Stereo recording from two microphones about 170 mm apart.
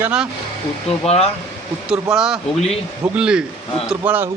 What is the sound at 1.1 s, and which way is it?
Speech, 35° left (ahead or behind).